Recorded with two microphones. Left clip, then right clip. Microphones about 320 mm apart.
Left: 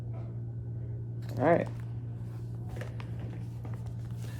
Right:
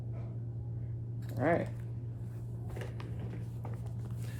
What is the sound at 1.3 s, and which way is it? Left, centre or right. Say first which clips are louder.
Speech: left 5 dB; left.